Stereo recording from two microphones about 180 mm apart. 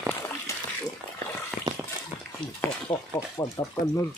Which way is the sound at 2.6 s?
20° left (ahead or behind).